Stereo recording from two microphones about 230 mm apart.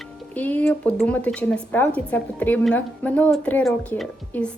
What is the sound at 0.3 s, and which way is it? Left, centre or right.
A woman's voice, centre.